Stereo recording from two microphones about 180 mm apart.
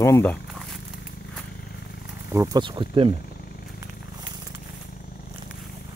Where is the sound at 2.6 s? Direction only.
25° right (ahead or behind).